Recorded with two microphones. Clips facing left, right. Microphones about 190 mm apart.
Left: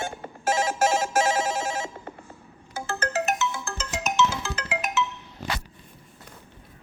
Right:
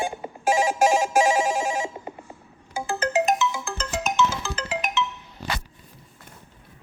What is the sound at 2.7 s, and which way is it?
Music, 15° right (ahead or behind).